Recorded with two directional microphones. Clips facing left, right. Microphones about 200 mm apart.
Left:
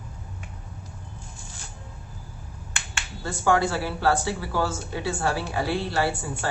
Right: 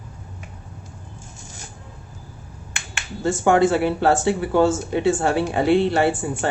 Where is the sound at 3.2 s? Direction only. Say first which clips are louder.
Right 6 dB; 20° right (ahead or behind).